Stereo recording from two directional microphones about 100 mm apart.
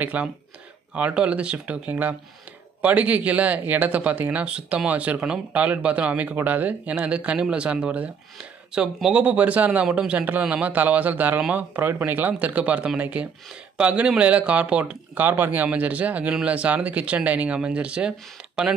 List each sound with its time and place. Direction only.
0.0 s speech: 15° right (ahead or behind)